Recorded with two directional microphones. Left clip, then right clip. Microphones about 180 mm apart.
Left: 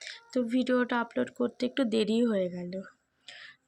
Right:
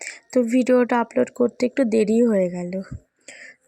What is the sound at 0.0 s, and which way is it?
Speech, 45° right (ahead or behind).